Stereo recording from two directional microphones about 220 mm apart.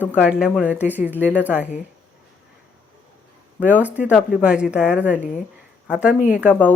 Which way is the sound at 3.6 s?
5° right (ahead or behind).